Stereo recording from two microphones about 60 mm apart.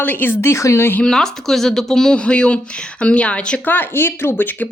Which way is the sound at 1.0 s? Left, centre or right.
Centre.